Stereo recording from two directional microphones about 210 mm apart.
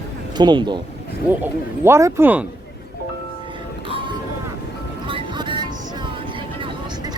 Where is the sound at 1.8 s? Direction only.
15° right (ahead or behind).